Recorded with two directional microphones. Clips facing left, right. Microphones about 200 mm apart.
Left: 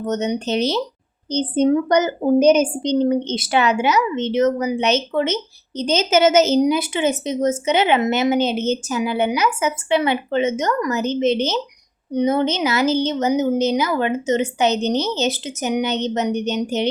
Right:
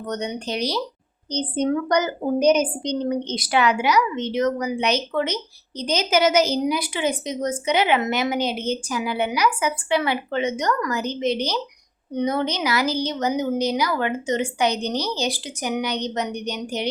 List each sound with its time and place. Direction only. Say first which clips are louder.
0.0 s a woman's voice: left 6 dB; 20° left (ahead or behind)